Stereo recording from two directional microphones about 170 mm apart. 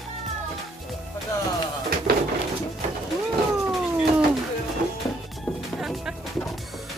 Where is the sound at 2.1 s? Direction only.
65° right (ahead or behind).